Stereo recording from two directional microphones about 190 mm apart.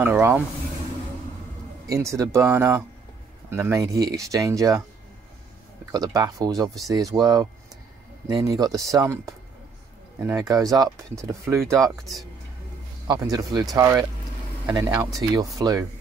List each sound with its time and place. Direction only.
0.0 s speech: 10° right (ahead or behind)
1.9 s speech: 15° right (ahead or behind)
5.9 s speech: 20° right (ahead or behind)
13.0 s speech: 20° right (ahead or behind)